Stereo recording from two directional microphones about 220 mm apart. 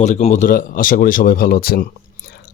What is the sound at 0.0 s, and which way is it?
Speech, 30° left (ahead or behind).